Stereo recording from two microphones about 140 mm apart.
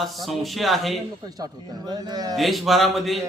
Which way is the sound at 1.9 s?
30° right (ahead or behind).